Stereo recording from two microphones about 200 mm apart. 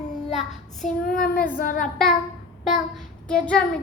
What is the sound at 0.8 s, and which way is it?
A child's voice, 45° left (ahead or behind).